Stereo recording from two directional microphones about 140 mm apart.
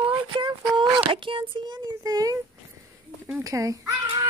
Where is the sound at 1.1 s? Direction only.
40° right (ahead or behind).